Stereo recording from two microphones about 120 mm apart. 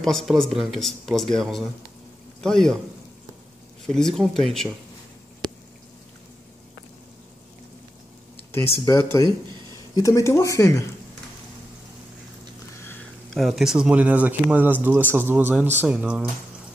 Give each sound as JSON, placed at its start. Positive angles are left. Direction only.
{"t": 0.0, "sound": "speech", "side_deg": 5}
{"t": 3.8, "sound": "speech", "side_deg": 5}
{"t": 8.8, "sound": "speech", "side_deg": 30}
{"t": 9.2, "sound": "speech", "side_deg": -40}
{"t": 9.9, "sound": "speech", "side_deg": 25}
{"t": 13.3, "sound": "speech", "side_deg": 0}